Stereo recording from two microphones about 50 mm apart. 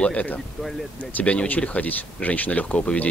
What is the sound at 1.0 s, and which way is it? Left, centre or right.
A man's voice, left.